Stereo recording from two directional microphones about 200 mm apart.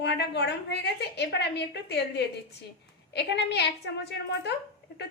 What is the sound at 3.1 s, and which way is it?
Speech, 55° left (ahead or behind).